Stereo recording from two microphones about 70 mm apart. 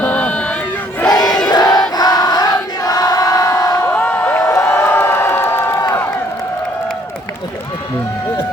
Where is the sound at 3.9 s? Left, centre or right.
Left.